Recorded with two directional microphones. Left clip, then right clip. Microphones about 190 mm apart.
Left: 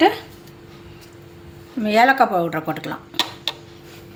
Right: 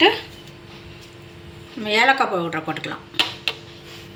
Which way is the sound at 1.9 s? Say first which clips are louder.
Left 2 dB; 60° left (ahead or behind).